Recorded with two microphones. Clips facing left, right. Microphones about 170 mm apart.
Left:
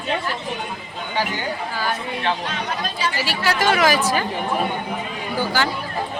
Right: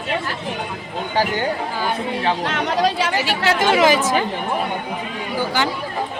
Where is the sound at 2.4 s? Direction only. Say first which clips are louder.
Right 7 dB; 85° right.